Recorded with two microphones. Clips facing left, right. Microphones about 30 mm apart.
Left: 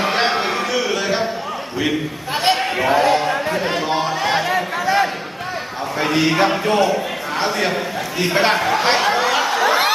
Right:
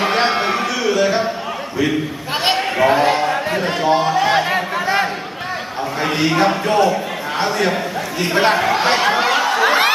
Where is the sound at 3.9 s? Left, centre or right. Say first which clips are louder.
Right 7 dB; centre.